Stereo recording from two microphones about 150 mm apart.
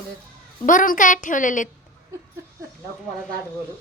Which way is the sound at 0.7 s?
60° left (ahead or behind).